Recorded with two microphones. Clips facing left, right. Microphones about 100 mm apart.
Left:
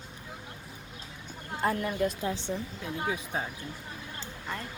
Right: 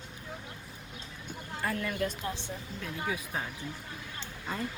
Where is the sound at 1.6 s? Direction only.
25° left (ahead or behind).